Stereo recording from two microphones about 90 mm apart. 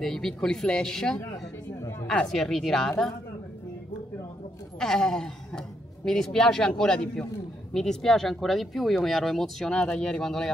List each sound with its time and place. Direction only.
0.0 s speech: 5° left (ahead or behind)
1.8 s a sound: 35° left (ahead or behind)
2.0 s speech: 5° left (ahead or behind)
4.7 s speech: 5° left (ahead or behind)